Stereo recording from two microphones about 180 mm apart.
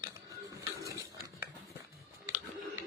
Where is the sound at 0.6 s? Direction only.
15° right (ahead or behind).